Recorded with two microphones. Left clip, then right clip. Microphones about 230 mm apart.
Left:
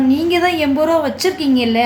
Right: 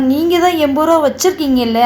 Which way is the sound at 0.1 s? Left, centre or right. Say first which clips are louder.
Right 6 dB; centre.